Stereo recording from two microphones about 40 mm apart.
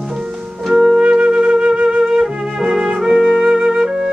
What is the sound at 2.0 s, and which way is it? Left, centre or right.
Music, centre.